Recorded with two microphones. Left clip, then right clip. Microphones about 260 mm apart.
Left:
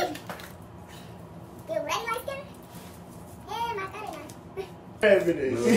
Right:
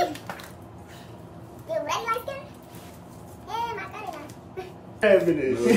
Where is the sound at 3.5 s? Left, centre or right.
Centre.